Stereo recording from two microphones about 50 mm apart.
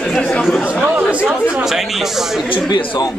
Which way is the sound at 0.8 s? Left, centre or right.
Right.